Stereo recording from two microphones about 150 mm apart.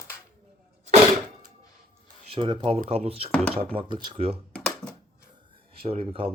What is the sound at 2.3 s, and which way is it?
Speech, 35° right (ahead or behind).